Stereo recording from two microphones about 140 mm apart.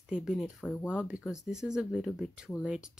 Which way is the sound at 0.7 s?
15° left (ahead or behind).